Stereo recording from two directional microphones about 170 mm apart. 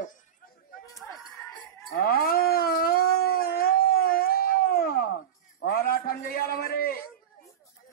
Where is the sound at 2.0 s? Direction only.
60° left (ahead or behind).